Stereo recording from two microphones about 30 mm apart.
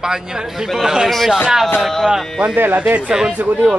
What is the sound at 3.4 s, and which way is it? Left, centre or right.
Speech, right.